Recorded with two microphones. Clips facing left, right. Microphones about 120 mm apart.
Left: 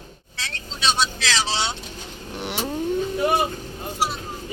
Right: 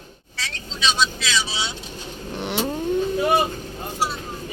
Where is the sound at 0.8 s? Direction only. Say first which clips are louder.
Even; 70° left (ahead or behind).